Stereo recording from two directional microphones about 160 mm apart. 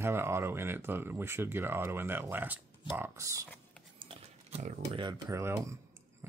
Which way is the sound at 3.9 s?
40° right (ahead or behind).